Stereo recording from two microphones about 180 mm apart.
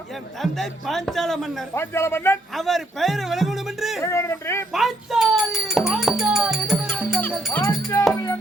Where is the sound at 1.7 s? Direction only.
15° left (ahead or behind).